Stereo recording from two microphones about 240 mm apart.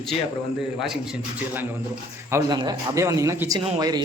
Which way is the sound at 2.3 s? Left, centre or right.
Centre.